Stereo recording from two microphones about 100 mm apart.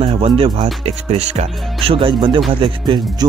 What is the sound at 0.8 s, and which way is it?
Speech, 90° right.